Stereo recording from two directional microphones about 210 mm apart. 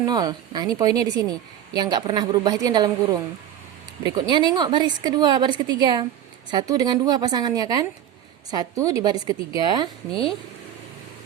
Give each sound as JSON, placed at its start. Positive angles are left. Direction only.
{"t": 0.0, "sound": "a woman's voice", "side_deg": -20}
{"t": 10.1, "sound": "speech", "side_deg": 25}